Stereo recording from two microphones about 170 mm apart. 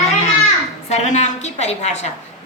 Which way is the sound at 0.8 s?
40° left (ahead or behind).